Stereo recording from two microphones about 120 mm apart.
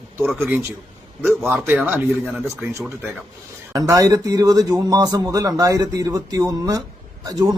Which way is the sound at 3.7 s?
30° right (ahead or behind).